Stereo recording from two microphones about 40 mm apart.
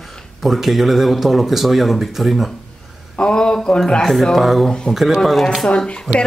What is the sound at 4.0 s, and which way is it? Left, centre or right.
Speech, centre.